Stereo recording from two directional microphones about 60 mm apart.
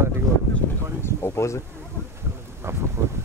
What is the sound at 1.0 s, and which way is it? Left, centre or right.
Speech, left.